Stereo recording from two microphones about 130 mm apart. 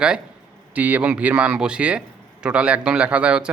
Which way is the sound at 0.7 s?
10° right (ahead or behind).